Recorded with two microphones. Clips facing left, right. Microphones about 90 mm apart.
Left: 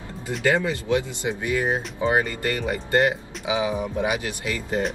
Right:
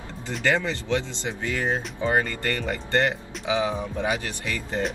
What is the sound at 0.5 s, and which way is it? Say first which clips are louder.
Speech: left 2 dB; 15° left (ahead or behind).